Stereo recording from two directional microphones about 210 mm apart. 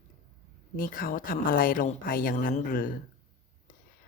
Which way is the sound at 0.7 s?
45° left (ahead or behind).